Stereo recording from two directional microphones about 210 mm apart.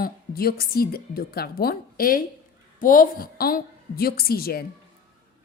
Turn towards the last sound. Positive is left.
turn(degrees=45)  # may be behind; listen again after turning